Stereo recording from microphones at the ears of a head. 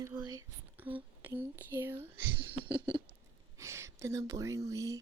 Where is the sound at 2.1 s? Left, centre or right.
Right.